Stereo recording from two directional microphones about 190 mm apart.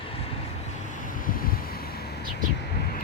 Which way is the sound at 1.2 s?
50° left (ahead or behind).